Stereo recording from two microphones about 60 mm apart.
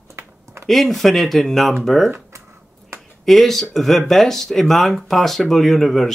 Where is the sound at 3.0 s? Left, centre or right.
Centre.